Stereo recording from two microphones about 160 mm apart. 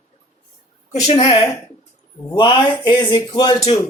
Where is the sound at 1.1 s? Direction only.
35° left (ahead or behind).